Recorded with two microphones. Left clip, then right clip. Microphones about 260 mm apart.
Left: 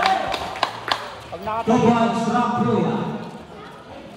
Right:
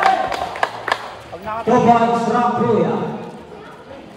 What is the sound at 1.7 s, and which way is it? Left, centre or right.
A man's voice, centre.